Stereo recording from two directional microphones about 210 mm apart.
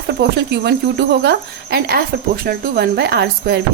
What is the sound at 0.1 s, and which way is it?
Speech, 50° right (ahead or behind).